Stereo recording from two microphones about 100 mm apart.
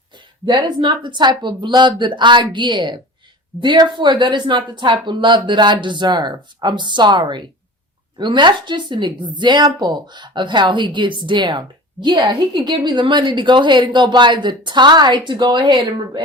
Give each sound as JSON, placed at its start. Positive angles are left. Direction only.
{"t": 0.4, "sound": "speech", "side_deg": -50}